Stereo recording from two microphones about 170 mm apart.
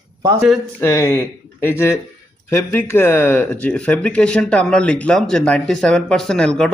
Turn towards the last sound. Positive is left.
turn(degrees=5)  # may be behind; listen again after turning